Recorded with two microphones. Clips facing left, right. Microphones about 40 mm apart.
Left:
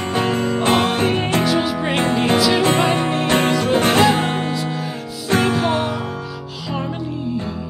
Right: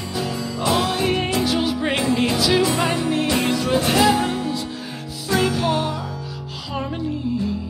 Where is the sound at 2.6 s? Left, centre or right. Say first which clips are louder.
Left 4 dB; left.